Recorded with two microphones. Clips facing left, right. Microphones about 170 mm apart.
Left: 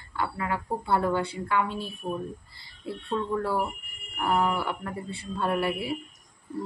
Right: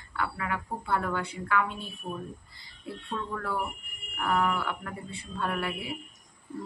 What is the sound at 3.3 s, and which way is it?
A woman's voice, 30° left (ahead or behind).